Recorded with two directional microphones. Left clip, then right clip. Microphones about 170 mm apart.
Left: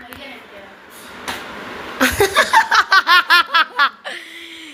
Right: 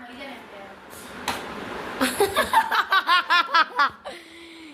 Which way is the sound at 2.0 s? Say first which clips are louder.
Left 8 dB; 15° left (ahead or behind).